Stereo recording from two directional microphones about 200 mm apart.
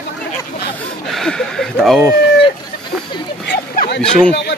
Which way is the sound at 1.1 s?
Centre (ahead or behind).